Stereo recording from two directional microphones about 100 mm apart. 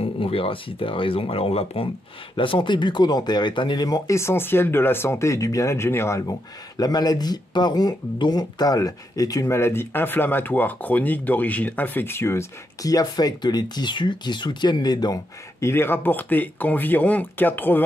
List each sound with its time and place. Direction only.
0.0 s speech: 70° left (ahead or behind)
2.3 s speech: 60° left (ahead or behind); by 4.2 s 40° left (ahead or behind)
4.2 s speech: 25° left (ahead or behind)
6.8 s speech: 40° left (ahead or behind)
15.6 s speech: 25° left (ahead or behind)